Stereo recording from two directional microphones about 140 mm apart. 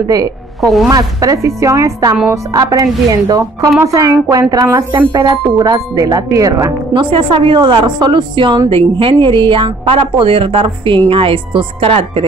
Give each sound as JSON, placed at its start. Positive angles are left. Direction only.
{"t": 0.6, "sound": "a woman's voice", "side_deg": 0}
{"t": 0.8, "sound": "speech", "side_deg": -25}
{"t": 6.9, "sound": "a woman's voice", "side_deg": -35}